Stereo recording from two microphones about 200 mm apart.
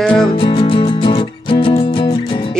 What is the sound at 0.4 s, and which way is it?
Music, 25° left (ahead or behind).